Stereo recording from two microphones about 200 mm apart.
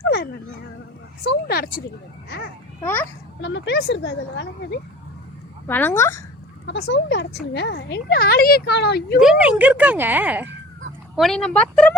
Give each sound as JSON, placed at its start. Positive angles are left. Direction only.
{"t": 1.2, "sound": "speech", "side_deg": 55}
{"t": 2.8, "sound": "a woman's voice", "side_deg": 10}
{"t": 3.4, "sound": "speech", "side_deg": 60}
{"t": 5.6, "sound": "a woman's voice", "side_deg": 10}
{"t": 6.7, "sound": "speech", "side_deg": 55}
{"t": 9.2, "sound": "speech", "side_deg": -5}